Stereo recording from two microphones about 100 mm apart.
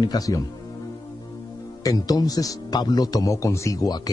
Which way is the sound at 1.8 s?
40° left (ahead or behind).